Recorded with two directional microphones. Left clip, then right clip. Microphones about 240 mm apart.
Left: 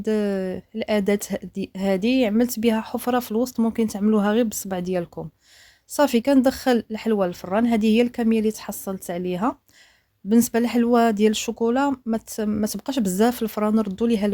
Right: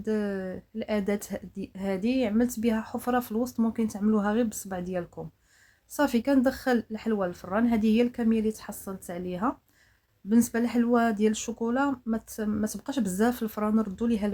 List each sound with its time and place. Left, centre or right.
0.0 s speech: left